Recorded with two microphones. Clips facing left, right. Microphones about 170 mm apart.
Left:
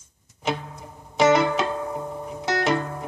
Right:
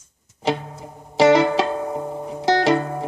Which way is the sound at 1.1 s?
30° right (ahead or behind).